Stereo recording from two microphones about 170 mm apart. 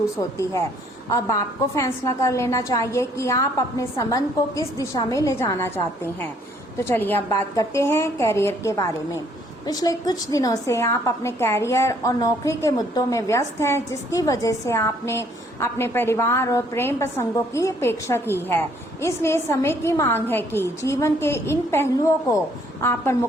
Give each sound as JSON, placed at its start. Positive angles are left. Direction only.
{"t": 0.2, "sound": "a woman's voice", "side_deg": 15}